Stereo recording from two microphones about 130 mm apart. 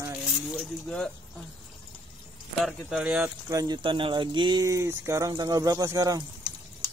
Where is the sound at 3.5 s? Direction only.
25° right (ahead or behind).